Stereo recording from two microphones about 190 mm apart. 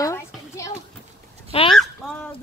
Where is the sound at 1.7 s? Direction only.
5° left (ahead or behind).